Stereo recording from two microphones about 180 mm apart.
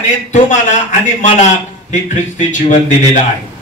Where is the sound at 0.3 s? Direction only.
45° left (ahead or behind).